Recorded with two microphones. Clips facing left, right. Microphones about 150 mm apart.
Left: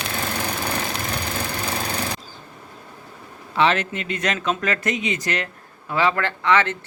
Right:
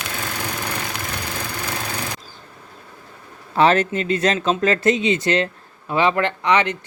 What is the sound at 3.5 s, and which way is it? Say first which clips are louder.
Speech: right 4 dB; 40° right (ahead or behind).